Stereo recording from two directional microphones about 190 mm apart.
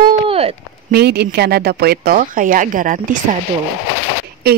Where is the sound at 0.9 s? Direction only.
55° right (ahead or behind).